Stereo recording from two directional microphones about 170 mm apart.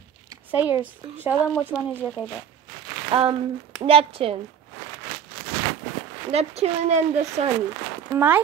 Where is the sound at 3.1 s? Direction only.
35° right (ahead or behind).